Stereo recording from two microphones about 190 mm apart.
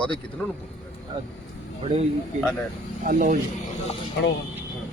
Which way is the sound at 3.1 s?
45° right (ahead or behind).